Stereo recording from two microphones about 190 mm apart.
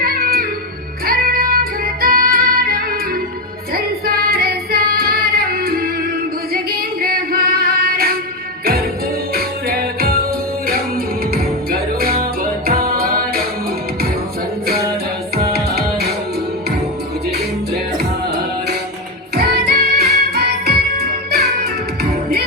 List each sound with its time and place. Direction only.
0.0 s music: 50° right (ahead or behind)
3.8 s female singing: 55° right (ahead or behind)
6.5 s singing: 50° right (ahead or behind)
8.6 s music: 50° right (ahead or behind)
15.5 s music: 55° right (ahead or behind)
17.9 s music: 60° right (ahead or behind)